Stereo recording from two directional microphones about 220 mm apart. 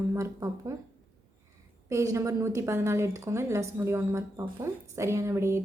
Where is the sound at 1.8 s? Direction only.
15° right (ahead or behind).